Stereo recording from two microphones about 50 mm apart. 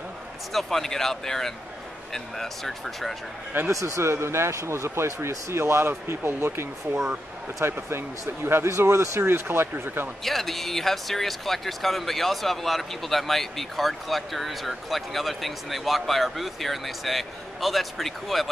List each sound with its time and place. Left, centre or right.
0.5 s speech: centre
3.8 s speech: right
8.6 s speech: right
9.2 s speech: right
10.2 s speech: centre